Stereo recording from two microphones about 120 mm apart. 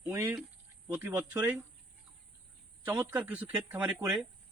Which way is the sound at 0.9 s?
20° right (ahead or behind).